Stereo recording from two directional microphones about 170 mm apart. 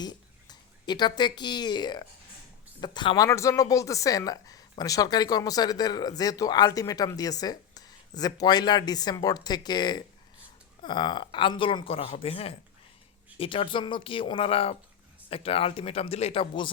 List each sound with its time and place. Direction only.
0.0 s a woman's voice: 25° left (ahead or behind)
3.2 s speech: 15° left (ahead or behind); by 16.7 s 30° left (ahead or behind)